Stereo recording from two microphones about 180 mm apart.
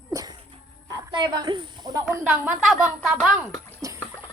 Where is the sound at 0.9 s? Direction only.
25° right (ahead or behind).